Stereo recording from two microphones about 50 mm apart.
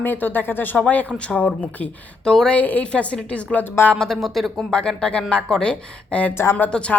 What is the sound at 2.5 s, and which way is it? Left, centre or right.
Speech, left.